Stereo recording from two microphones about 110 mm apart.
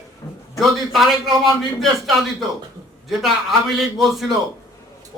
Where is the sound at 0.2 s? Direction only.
25° left (ahead or behind).